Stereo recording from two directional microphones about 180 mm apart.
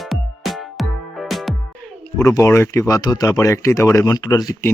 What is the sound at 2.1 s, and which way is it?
Speech, 15° left (ahead or behind).